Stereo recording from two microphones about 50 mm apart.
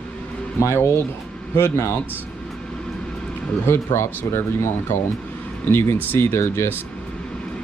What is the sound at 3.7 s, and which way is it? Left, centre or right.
Speech, left.